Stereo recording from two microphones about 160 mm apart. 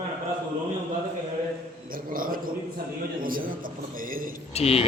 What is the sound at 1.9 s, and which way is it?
A man's voice, 60° right (ahead or behind).